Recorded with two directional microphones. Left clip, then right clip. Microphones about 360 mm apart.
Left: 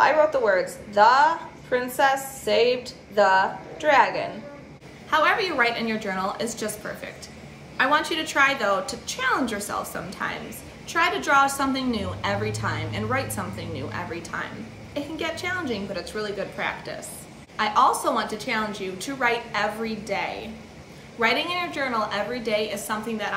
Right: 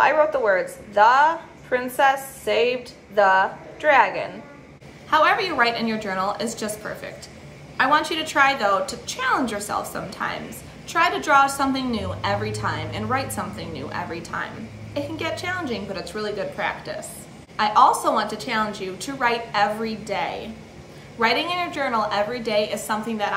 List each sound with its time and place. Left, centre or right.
0.0 s a woman's voice: centre